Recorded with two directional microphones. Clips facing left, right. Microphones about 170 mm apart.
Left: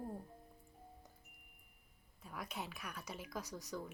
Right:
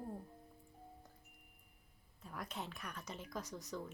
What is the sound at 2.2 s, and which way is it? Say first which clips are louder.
Speech: even; 5° left (ahead or behind).